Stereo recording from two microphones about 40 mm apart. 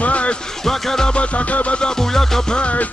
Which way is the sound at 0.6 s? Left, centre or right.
Centre.